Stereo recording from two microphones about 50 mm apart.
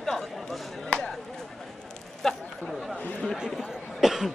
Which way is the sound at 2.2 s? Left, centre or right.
Centre.